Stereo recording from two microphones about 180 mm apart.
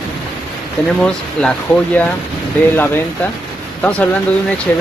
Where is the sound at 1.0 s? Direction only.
5° left (ahead or behind).